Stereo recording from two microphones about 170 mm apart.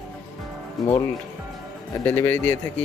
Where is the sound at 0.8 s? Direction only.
Centre (ahead or behind).